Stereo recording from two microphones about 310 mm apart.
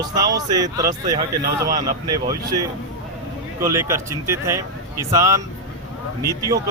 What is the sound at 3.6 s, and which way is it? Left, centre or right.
Speech, centre.